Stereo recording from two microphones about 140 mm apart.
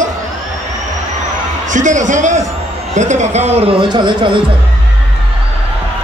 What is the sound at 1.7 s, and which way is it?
A man's voice, 60° right (ahead or behind).